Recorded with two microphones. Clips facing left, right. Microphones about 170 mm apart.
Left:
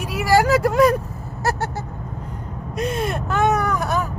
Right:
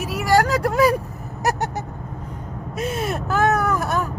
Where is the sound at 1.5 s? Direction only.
15° right (ahead or behind).